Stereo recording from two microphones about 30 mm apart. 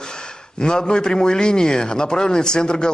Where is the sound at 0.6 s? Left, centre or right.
Left.